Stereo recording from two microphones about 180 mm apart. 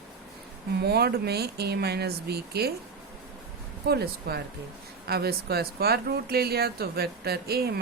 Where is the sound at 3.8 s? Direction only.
60° right (ahead or behind).